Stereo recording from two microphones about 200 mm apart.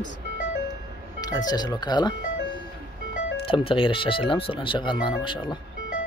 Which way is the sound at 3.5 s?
25° left (ahead or behind).